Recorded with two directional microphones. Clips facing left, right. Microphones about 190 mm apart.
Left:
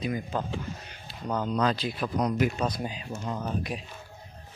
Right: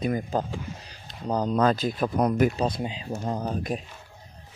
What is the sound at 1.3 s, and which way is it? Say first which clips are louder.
Speech: right 4 dB; 35° right (ahead or behind).